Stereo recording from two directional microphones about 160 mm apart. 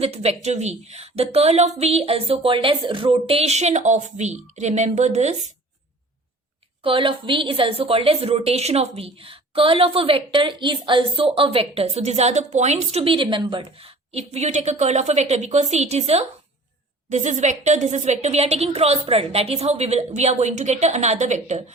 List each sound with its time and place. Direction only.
0.0 s a woman's voice: 40° right (ahead or behind)
6.8 s a woman's voice: 35° right (ahead or behind)